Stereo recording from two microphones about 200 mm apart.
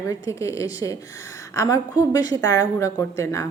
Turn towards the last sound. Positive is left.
turn(degrees=15)  # may be behind; listen again after turning